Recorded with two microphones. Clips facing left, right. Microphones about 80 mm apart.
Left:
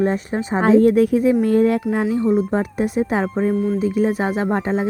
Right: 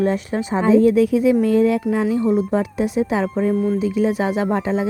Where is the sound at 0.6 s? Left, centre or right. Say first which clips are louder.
Left 1 dB; left.